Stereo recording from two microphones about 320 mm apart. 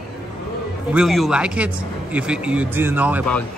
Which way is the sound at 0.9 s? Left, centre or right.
Centre.